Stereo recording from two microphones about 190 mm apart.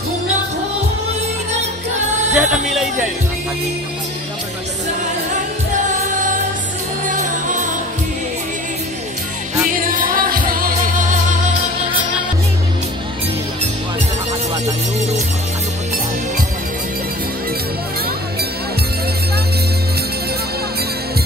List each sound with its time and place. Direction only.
2.3 s speech: 5° right (ahead or behind)
7.1 s music: 45° right (ahead or behind)
9.8 s music: 45° right (ahead or behind)